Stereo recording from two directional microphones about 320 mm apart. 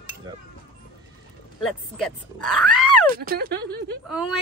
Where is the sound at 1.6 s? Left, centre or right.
Centre.